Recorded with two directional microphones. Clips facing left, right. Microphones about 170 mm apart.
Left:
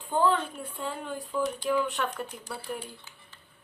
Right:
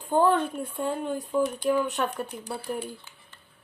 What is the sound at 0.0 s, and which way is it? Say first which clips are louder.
Speech: right 4 dB; 50° right (ahead or behind).